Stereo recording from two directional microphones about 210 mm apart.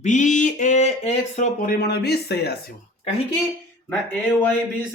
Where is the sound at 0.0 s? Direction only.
35° left (ahead or behind); by 2.6 s 50° left (ahead or behind).